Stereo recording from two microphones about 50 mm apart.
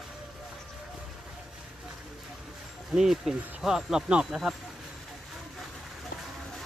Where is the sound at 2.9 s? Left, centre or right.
Centre.